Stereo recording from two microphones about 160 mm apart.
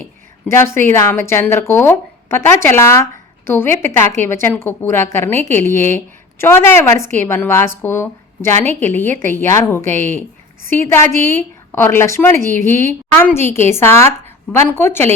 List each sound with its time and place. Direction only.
0.0 s a woman's voice: 15° left (ahead or behind)